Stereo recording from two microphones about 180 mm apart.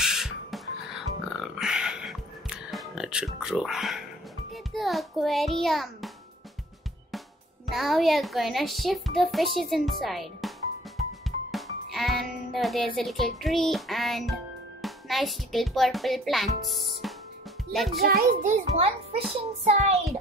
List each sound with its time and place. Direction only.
0.0 s music: centre (ahead or behind)
7.6 s a child's voice: centre (ahead or behind)
11.5 s a child's voice: centre (ahead or behind)
18.0 s a child's voice: 55° right (ahead or behind)
19.4 s child singing: 35° right (ahead or behind)